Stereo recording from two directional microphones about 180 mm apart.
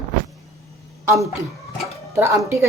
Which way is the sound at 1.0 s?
15° right (ahead or behind).